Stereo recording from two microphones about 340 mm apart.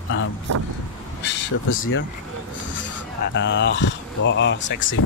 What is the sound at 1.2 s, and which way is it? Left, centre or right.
Speech, left.